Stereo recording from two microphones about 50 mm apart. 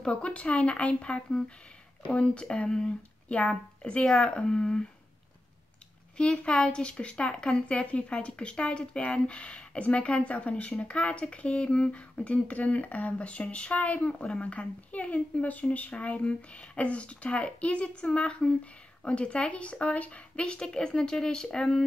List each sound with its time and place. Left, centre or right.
0.0 s speech: left
6.1 s speech: centre